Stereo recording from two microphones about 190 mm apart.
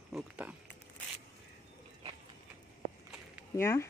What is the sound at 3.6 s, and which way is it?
Speech, 10° left (ahead or behind).